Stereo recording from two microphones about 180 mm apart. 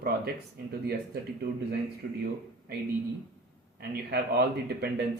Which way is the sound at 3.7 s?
60° right (ahead or behind).